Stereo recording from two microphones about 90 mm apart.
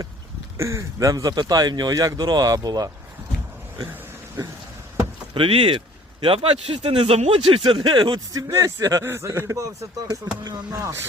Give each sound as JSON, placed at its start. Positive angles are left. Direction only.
{"t": 0.5, "sound": "speech", "side_deg": -35}
{"t": 5.3, "sound": "speech", "side_deg": -80}
{"t": 8.3, "sound": "speech", "side_deg": -40}
{"t": 10.1, "sound": "speech", "side_deg": -45}
{"t": 10.7, "sound": "speech", "side_deg": -30}